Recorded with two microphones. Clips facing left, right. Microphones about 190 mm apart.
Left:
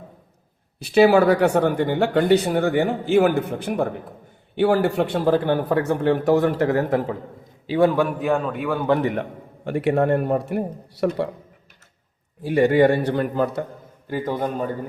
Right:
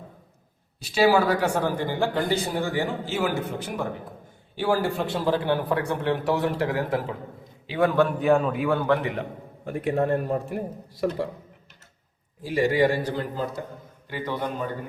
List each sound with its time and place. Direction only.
0.8 s speech: 60° left (ahead or behind)
7.7 s a man's voice: 30° left (ahead or behind)
8.2 s a man's voice: centre (ahead or behind)
9.6 s a man's voice: 75° left (ahead or behind)
12.4 s speech: 60° left (ahead or behind)
14.1 s speech: 45° left (ahead or behind)